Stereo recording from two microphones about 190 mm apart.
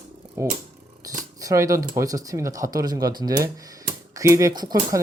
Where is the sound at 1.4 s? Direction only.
15° right (ahead or behind).